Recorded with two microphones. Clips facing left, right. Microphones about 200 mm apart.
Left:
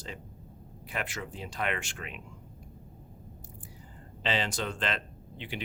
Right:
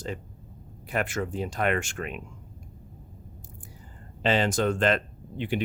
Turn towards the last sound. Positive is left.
turn(degrees=-50)  # may be behind; listen again after turning